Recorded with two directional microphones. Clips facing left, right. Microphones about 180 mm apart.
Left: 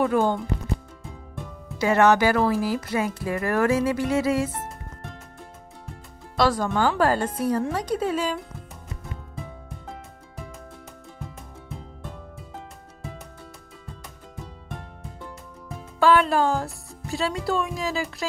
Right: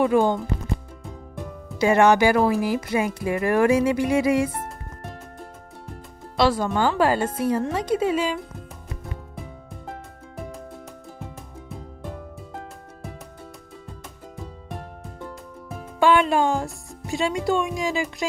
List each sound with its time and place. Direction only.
0.0 s speech: 15° right (ahead or behind)
1.8 s speech: 15° right (ahead or behind)
6.3 s speech: 10° right (ahead or behind)
16.0 s music: 15° right (ahead or behind)
16.3 s speech: 15° right (ahead or behind)